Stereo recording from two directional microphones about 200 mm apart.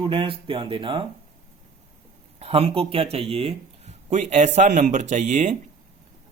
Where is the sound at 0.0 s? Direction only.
25° right (ahead or behind).